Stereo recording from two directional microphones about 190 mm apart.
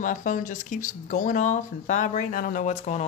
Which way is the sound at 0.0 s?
40° left (ahead or behind).